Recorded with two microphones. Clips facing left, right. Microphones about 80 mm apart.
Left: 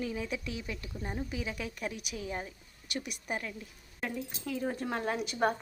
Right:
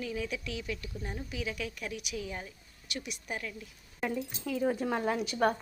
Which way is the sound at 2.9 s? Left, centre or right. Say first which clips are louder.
Left 2 dB; left.